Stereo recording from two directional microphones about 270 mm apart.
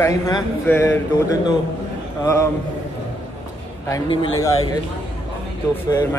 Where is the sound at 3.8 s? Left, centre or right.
Centre.